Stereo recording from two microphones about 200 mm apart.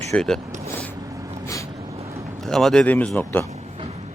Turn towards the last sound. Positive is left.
turn(degrees=5)  # may be behind; listen again after turning